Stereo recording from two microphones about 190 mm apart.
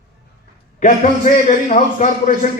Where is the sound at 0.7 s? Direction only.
40° left (ahead or behind).